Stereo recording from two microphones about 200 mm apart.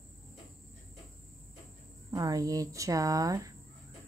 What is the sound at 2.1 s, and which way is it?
Speech, 20° right (ahead or behind).